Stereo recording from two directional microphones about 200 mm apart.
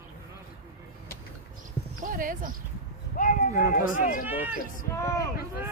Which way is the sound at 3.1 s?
45° left (ahead or behind).